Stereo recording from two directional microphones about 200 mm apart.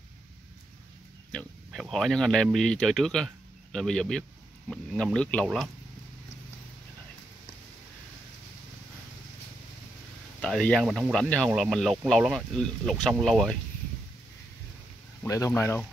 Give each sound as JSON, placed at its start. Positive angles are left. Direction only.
{"t": 1.3, "sound": "speech", "side_deg": 5}
{"t": 10.4, "sound": "speech", "side_deg": 5}
{"t": 15.2, "sound": "speech", "side_deg": 15}